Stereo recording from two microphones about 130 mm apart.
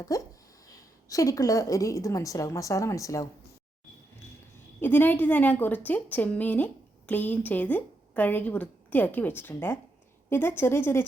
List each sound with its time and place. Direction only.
0.1 s a woman's voice: 25° left (ahead or behind)
4.8 s speech: 15° left (ahead or behind)